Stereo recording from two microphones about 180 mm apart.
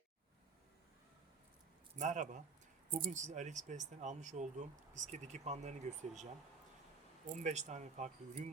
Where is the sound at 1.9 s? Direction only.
45° right (ahead or behind).